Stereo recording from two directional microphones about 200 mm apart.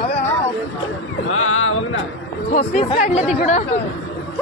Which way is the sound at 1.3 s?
90° left.